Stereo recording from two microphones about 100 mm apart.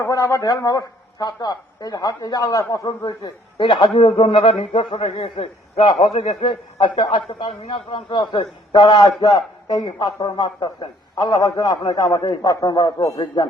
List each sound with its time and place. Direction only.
0.0 s a man's voice: 35° left (ahead or behind)
3.1 s a man's voice: 50° left (ahead or behind)
4.0 s a man's voice: 60° left (ahead or behind); by 5.8 s 90° left
6.0 s a man's voice: 70° left (ahead or behind); by 13.1 s 40° left (ahead or behind)